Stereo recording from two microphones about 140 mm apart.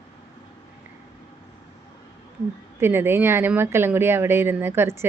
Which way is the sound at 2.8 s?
15° right (ahead or behind).